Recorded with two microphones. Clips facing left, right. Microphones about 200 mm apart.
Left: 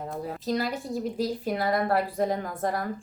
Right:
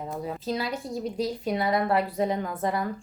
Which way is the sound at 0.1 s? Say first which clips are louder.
Left 1 dB; centre (ahead or behind).